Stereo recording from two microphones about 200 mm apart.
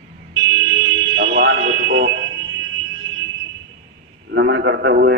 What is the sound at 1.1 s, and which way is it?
Fire alarm, 60° right (ahead or behind).